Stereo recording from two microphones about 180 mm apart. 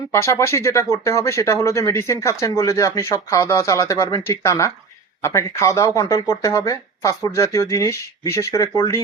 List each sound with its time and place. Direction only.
0.1 s speech: 15° left (ahead or behind)